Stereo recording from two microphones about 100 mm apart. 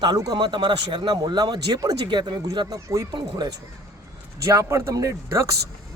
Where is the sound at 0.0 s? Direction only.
40° right (ahead or behind).